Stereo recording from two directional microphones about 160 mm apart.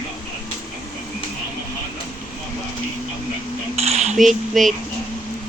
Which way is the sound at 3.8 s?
40° right (ahead or behind).